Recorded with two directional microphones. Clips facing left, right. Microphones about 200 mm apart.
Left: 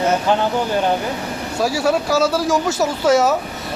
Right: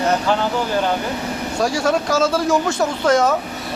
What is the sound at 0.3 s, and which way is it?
Speech, 20° left (ahead or behind).